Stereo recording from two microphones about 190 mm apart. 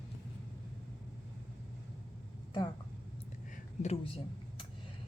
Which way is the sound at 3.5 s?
35° left (ahead or behind).